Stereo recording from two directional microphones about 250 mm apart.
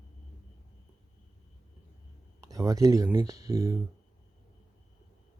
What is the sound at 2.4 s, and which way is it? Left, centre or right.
Speech, centre.